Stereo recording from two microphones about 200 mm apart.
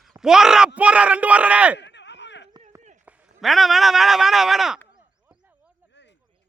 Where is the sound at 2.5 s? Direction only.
30° right (ahead or behind).